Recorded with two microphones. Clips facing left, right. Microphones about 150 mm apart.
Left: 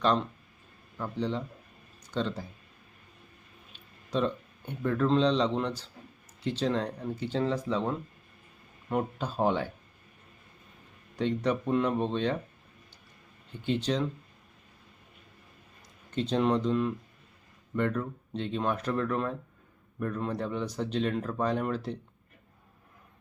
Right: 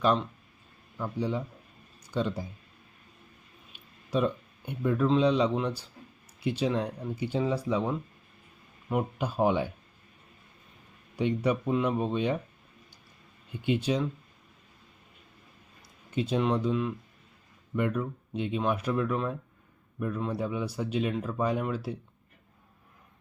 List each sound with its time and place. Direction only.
0.0 s speech: 5° right (ahead or behind)
3.7 s speech: 10° right (ahead or behind)
11.2 s speech: 10° right (ahead or behind)
13.5 s speech: 10° right (ahead or behind)
16.0 s speech: 10° right (ahead or behind)